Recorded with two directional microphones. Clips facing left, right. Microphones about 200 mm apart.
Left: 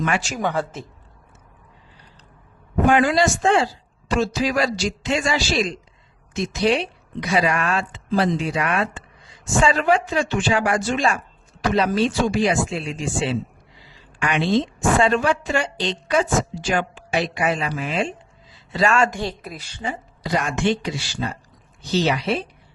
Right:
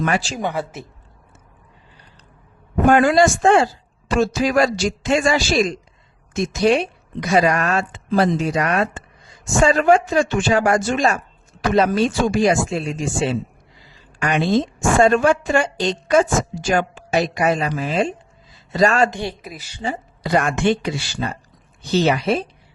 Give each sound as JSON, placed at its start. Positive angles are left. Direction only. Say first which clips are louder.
{"t": 0.0, "sound": "speech", "louder": "right 2 dB", "side_deg": -35}
{"t": 0.3, "sound": "speech", "louder": "even", "side_deg": -10}
{"t": 2.8, "sound": "a woman's voice", "louder": "right 4 dB", "side_deg": -45}
{"t": 19.1, "sound": "speech", "louder": "right 1 dB", "side_deg": -15}
{"t": 19.4, "sound": "a woman's voice", "louder": "even", "side_deg": -5}
{"t": 20.2, "sound": "a woman's voice", "louder": "right 4 dB", "side_deg": -55}